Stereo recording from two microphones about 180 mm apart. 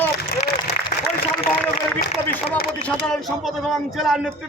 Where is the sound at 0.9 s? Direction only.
45° left (ahead or behind).